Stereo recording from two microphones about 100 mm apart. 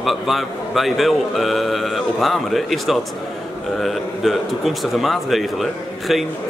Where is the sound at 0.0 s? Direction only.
Centre (ahead or behind).